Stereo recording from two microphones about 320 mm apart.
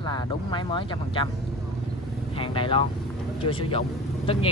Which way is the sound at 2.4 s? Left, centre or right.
Centre.